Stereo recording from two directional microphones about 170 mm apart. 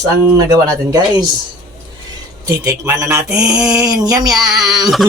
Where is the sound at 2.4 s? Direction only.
15° right (ahead or behind).